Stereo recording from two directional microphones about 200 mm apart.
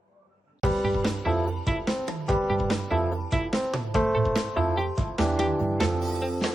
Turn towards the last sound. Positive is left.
turn(degrees=0)  # may be behind; listen again after turning